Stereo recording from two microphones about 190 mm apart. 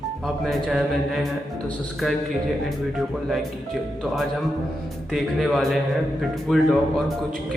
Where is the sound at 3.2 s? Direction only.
Centre (ahead or behind).